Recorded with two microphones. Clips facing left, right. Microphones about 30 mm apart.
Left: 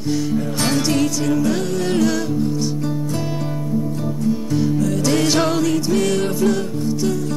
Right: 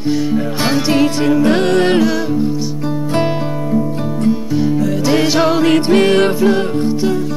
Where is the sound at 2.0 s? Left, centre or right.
Right.